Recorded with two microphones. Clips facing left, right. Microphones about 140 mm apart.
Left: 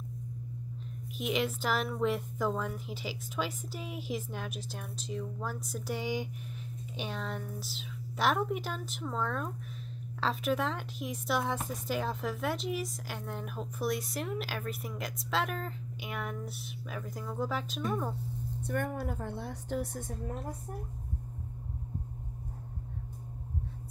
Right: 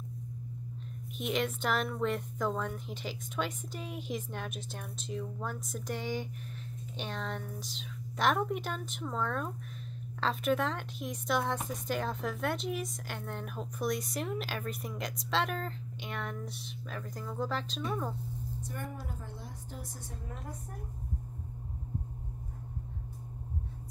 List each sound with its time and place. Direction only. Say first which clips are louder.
1.1 s speech: left 1 dB; 5° left (ahead or behind)
18.6 s a woman's voice: left 11 dB; 60° left (ahead or behind)